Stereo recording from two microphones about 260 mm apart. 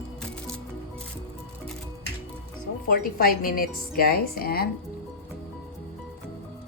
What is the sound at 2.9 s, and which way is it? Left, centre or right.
Speech, left.